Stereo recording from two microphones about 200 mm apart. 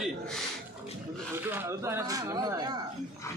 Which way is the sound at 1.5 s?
10° right (ahead or behind).